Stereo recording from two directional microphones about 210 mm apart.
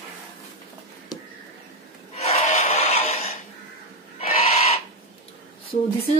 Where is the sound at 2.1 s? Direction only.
35° left (ahead or behind).